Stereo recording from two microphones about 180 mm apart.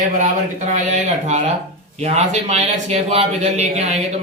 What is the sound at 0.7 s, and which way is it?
A man's voice, 40° right (ahead or behind).